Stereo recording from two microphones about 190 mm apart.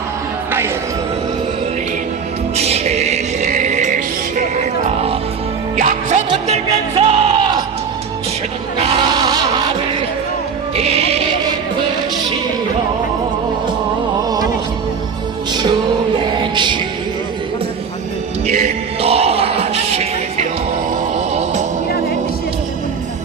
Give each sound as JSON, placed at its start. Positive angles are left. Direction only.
{"t": 2.6, "sound": "music", "side_deg": -35}
{"t": 8.8, "sound": "a sound", "side_deg": -25}
{"t": 10.8, "sound": "music", "side_deg": -35}
{"t": 16.1, "sound": "music", "side_deg": -25}
{"t": 18.4, "sound": "music", "side_deg": -35}